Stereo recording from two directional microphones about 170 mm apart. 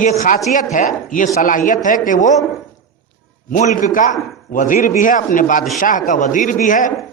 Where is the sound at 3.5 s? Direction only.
50° left (ahead or behind).